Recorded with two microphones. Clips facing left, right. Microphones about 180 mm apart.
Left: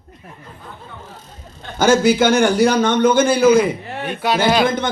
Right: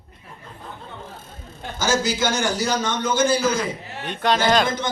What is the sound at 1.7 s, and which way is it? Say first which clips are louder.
A man's voice: left 9 dB; 60° left (ahead or behind).